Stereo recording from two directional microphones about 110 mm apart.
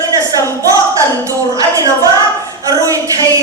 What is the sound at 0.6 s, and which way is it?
Clapping, 30° right (ahead or behind).